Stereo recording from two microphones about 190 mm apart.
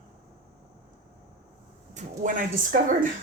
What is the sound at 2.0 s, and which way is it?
A woman's voice, 45° right (ahead or behind).